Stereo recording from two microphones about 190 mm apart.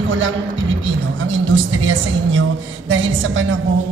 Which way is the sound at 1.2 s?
90° right.